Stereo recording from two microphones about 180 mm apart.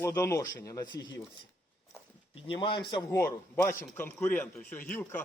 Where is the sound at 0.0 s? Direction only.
15° left (ahead or behind).